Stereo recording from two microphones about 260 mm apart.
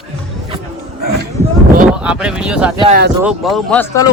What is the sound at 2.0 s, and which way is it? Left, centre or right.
Speech, centre.